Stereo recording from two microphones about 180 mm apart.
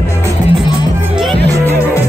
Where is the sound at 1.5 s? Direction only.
15° right (ahead or behind).